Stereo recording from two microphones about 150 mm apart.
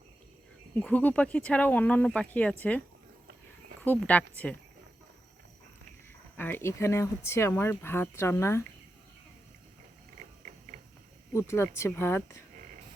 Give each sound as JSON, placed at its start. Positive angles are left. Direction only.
{"t": 0.8, "sound": "speech", "side_deg": 10}
{"t": 6.3, "sound": "speech", "side_deg": 15}
{"t": 11.3, "sound": "speech", "side_deg": 15}